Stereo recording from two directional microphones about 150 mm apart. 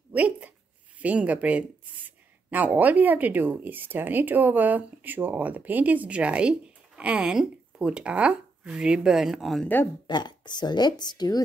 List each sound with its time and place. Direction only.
0.1 s speech: 10° right (ahead or behind)
10.0 s speech: 30° left (ahead or behind)